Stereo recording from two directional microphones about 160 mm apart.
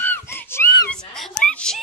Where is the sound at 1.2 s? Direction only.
5° left (ahead or behind).